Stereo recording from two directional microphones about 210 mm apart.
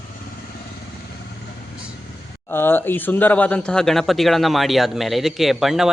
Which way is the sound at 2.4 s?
10° left (ahead or behind).